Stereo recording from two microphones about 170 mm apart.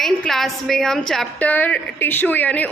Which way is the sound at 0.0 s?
Centre (ahead or behind).